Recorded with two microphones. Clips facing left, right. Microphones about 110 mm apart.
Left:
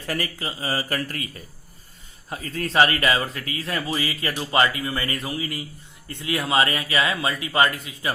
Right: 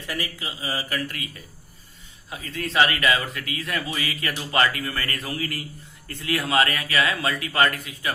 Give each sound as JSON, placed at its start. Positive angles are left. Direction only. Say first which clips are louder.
{"t": 0.1, "sound": "speech", "louder": "left 4 dB", "side_deg": 45}
{"t": 2.3, "sound": "speech", "louder": "left 3 dB", "side_deg": 40}